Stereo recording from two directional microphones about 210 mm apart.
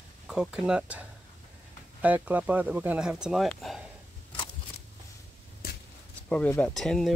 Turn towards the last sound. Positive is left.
turn(degrees=0)  # may be behind; listen again after turning